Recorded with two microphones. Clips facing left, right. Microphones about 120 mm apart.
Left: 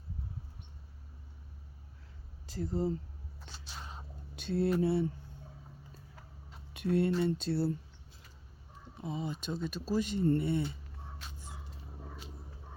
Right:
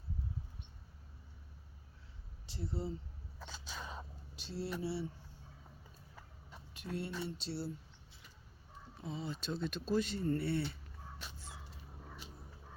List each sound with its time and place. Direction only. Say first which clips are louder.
2.5 s speech: left 8 dB; 45° left (ahead or behind)
4.4 s mantra: left 11 dB; 55° left (ahead or behind)
6.7 s speech: left 12 dB; 65° left (ahead or behind)
9.0 s speech: left 4 dB; 15° left (ahead or behind)